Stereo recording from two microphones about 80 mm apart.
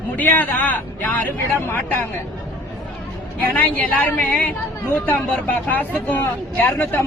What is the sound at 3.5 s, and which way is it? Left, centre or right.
Speech, left.